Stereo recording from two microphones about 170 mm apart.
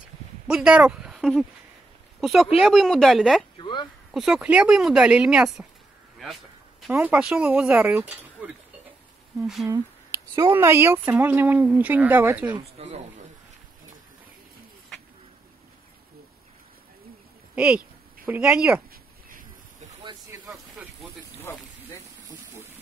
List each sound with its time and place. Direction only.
0.5 s speech: 5° right (ahead or behind)
3.5 s speech: 30° left (ahead or behind)
4.1 s speech: 5° right (ahead or behind)
6.9 s speech: 10° right (ahead or behind)
9.7 s a sound: 15° right (ahead or behind)
10.5 s speech: 15° right (ahead or behind)
12.5 s speech: 40° right (ahead or behind)
17.6 s speech: 10° right (ahead or behind)
20.3 s a sound: 15° right (ahead or behind)
21.4 s a sound: 15° left (ahead or behind)